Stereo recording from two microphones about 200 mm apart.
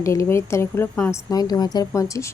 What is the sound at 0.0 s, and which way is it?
Speech, 15° left (ahead or behind).